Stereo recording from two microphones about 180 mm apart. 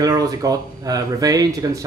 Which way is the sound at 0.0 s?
20° right (ahead or behind).